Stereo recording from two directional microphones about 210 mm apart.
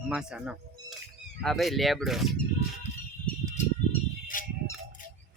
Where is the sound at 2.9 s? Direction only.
35° left (ahead or behind).